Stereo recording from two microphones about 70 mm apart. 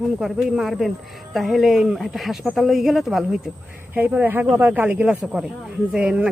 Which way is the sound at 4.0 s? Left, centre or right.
Right.